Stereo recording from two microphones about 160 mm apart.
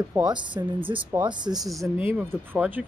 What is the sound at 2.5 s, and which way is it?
Speech, 10° right (ahead or behind).